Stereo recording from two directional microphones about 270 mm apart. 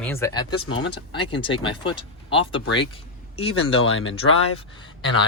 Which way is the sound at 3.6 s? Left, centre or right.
Left.